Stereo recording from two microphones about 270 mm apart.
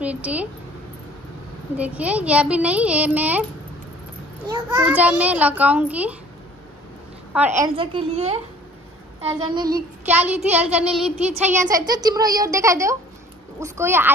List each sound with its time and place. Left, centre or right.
0.0 s speech: centre
1.8 s a child's voice: centre
4.5 s a child's voice: centre
7.3 s a woman's voice: centre
10.0 s a child's voice: centre
11.1 s a woman's voice: right
11.7 s a woman's voice: centre